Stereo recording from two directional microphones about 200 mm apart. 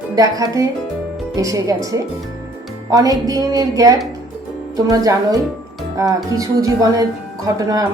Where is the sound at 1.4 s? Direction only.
15° right (ahead or behind).